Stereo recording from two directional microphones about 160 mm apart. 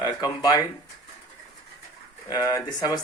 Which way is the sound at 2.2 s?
20° left (ahead or behind).